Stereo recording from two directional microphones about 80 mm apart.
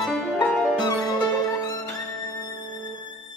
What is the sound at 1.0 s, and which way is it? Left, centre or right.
Music, left.